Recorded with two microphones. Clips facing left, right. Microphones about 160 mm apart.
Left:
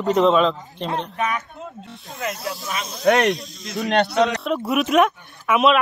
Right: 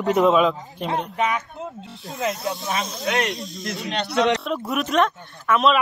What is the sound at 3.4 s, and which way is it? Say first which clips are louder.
Speech: left 2 dB; centre (ahead or behind).